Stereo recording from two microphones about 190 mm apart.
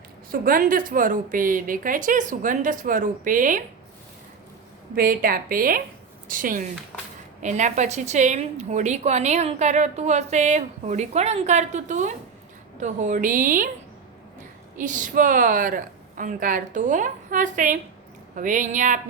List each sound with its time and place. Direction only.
0.3 s a woman's voice: 50° right (ahead or behind)
4.9 s a woman's voice: 50° right (ahead or behind)
14.8 s a woman's voice: 40° right (ahead or behind)